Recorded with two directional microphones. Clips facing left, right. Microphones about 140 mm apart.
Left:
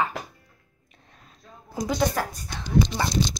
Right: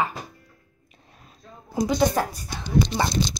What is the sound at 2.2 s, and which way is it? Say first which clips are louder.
Speech: right 3 dB; 25° right (ahead or behind).